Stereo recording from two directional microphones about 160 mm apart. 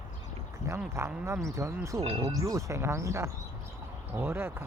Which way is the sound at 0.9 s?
15° right (ahead or behind).